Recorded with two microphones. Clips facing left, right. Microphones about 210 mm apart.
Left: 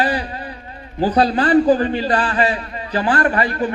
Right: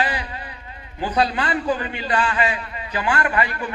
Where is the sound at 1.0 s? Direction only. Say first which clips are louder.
Left 6 dB; 35° left (ahead or behind).